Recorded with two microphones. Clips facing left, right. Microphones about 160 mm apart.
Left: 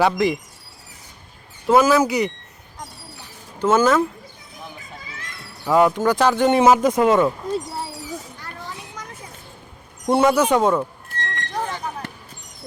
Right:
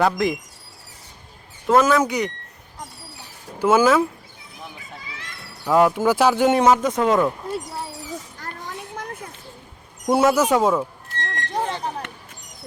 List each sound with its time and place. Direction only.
0.0 s speech: centre (ahead or behind)
1.6 s speech: centre (ahead or behind)
3.6 s speech: 10° right (ahead or behind)
5.0 s a sound: 45° left (ahead or behind)
5.6 s speech: centre (ahead or behind)
6.6 s speech: 10° left (ahead or behind)
8.8 s a sound: 55° right (ahead or behind)
10.1 s speech: 5° right (ahead or behind)
11.2 s vehicle: 25° right (ahead or behind)